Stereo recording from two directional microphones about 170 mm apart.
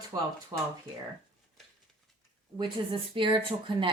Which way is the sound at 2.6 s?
30° right (ahead or behind).